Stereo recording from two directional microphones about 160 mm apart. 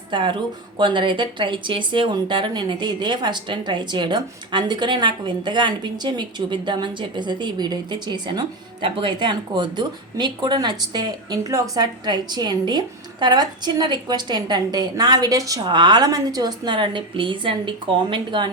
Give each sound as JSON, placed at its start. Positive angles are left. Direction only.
{"t": 0.1, "sound": "speech", "side_deg": -30}